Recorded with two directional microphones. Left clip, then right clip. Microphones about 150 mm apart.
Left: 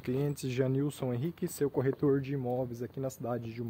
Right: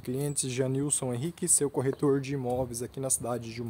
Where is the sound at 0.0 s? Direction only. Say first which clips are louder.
Right 1 dB; 15° right (ahead or behind).